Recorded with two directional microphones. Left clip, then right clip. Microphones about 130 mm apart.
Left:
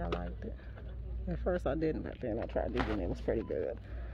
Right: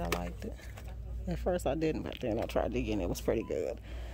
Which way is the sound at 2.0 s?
50° right (ahead or behind).